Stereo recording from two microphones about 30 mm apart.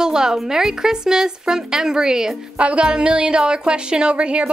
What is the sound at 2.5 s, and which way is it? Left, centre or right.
Music, right.